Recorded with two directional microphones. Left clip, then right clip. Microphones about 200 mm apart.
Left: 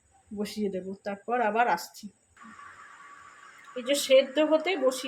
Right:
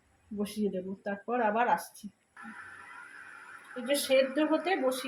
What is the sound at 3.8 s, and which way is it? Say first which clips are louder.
Speech: left 4 dB; 30° left (ahead or behind).